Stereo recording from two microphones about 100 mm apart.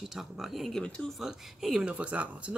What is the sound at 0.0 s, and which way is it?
Speech, centre (ahead or behind).